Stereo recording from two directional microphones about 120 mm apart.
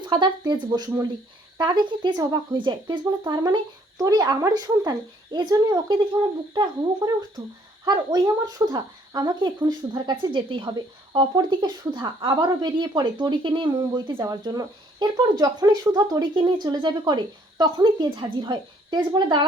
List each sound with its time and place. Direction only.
0.0 s speech: 40° right (ahead or behind)